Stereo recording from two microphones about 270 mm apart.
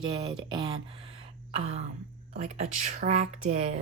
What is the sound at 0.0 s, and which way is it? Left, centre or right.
Speech, centre.